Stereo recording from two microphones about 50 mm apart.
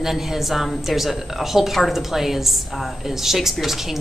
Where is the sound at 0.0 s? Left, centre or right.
Centre.